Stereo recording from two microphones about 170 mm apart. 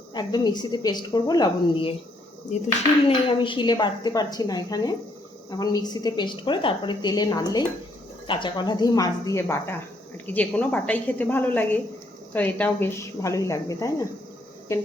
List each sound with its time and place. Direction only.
0.1 s a woman's voice: 25° left (ahead or behind)
3.1 s a woman's voice: 30° left (ahead or behind)